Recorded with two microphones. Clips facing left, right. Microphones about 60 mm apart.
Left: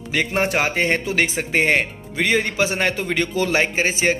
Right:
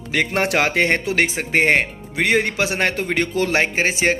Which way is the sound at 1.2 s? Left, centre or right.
Right.